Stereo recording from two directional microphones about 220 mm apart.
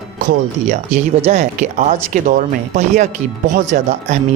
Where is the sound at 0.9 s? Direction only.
30° right (ahead or behind).